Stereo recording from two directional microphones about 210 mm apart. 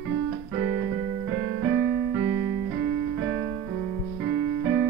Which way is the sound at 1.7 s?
10° right (ahead or behind).